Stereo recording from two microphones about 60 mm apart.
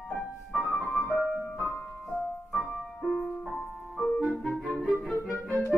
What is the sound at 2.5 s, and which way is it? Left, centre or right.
Music, centre.